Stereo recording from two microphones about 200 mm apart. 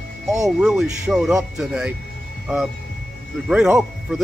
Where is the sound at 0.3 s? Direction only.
15° right (ahead or behind).